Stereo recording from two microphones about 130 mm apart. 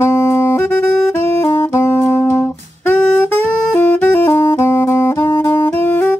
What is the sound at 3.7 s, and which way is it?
Saxophone, 15° left (ahead or behind).